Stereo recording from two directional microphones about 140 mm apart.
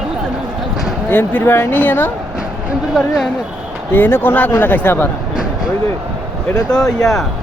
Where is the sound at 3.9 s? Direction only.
15° left (ahead or behind).